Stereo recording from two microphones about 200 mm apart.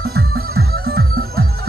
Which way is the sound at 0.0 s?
50° right (ahead or behind).